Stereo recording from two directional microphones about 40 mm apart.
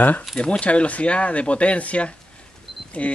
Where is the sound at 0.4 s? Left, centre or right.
Left.